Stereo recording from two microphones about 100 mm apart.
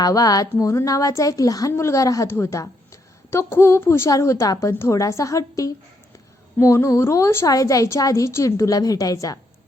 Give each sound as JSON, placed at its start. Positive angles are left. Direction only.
{"t": 0.0, "sound": "a woman's voice", "side_deg": 40}